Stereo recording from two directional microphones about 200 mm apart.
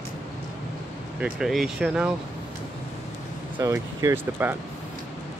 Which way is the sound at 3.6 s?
15° right (ahead or behind).